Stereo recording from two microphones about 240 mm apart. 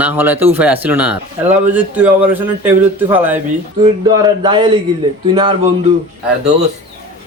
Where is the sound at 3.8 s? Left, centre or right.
Centre.